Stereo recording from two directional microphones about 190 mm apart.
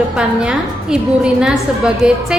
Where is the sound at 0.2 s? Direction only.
5° right (ahead or behind).